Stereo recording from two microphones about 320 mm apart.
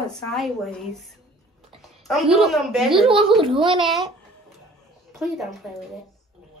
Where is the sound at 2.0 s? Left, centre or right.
Centre.